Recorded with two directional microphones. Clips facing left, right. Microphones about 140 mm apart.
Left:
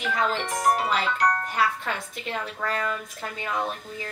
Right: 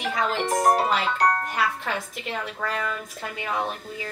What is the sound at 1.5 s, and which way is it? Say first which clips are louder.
A woman's voice: even; centre (ahead or behind).